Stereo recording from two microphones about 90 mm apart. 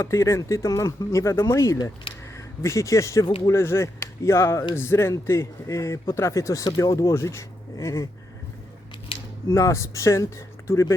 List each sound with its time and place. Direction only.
0.0 s speech: 30° left (ahead or behind)
9.5 s speech: 35° left (ahead or behind)